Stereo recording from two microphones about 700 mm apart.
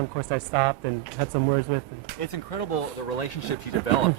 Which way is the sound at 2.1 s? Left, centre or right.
Left.